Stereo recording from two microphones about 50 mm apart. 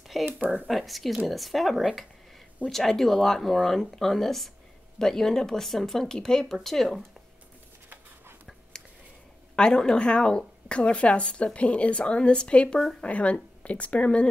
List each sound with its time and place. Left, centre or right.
0.2 s speech: right
0.7 s speech: centre
9.6 s a woman's voice: centre